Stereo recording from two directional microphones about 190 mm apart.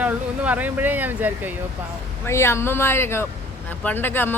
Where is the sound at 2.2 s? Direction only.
15° left (ahead or behind).